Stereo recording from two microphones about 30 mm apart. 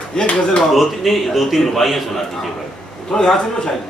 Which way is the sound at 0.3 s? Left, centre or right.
Left.